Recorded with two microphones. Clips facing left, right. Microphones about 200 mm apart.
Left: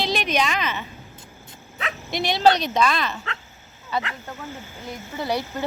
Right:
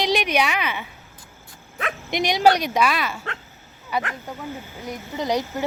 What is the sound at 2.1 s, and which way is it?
A woman's voice, 15° right (ahead or behind).